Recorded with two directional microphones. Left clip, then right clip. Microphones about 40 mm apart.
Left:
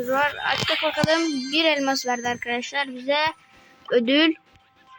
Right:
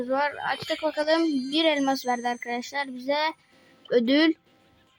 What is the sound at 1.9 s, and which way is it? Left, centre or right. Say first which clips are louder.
Speech: left 2 dB; right.